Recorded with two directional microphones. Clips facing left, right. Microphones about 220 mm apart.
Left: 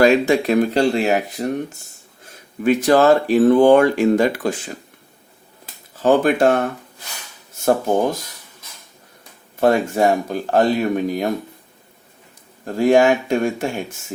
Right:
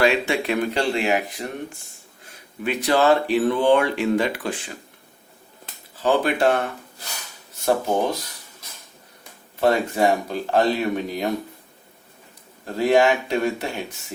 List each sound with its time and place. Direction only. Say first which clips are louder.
0.0 s speech: left 6 dB; 40° left (ahead or behind)
2.6 s speech: left 5 dB; 45° left (ahead or behind)
6.0 s speech: left 5 dB; 45° left (ahead or behind)
9.6 s speech: left 3 dB; 50° left (ahead or behind)
12.6 s speech: left 4 dB; 45° left (ahead or behind)